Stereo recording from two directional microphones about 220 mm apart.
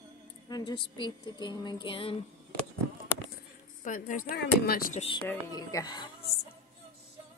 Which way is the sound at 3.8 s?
35° left (ahead or behind).